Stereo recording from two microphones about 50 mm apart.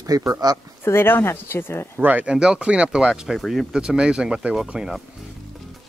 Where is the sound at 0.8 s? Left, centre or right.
Left.